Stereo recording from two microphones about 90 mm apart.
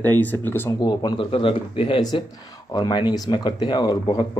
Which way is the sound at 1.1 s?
90° left.